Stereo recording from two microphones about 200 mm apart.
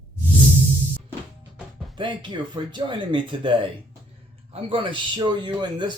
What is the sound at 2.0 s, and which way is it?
A man's voice, 25° right (ahead or behind).